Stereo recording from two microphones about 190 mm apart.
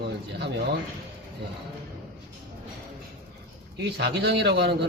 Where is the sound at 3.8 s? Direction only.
60° right (ahead or behind).